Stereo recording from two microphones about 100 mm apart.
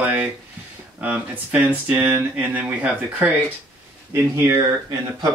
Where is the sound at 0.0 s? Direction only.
20° right (ahead or behind).